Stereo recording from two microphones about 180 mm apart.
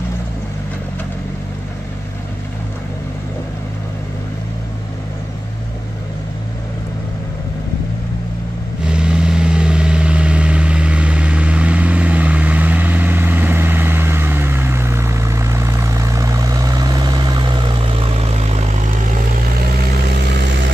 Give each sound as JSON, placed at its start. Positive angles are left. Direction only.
{"t": 8.8, "sound": "vehicle", "side_deg": -5}
{"t": 19.6, "sound": "vehicle", "side_deg": -60}